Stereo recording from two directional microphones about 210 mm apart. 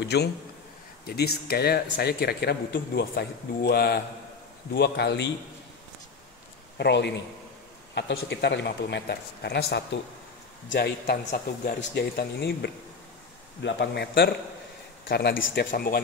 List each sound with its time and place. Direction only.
0.0 s a man's voice: 50° left (ahead or behind)
6.8 s a man's voice: 55° left (ahead or behind)
11.1 s a man's voice: 40° left (ahead or behind); by 15.7 s 65° left (ahead or behind)
15.7 s speech: 45° left (ahead or behind)